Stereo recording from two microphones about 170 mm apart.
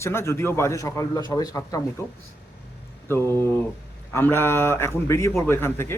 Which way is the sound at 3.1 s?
15° left (ahead or behind).